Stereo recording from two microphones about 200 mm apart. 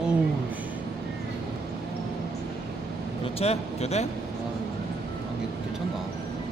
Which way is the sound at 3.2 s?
30° left (ahead or behind).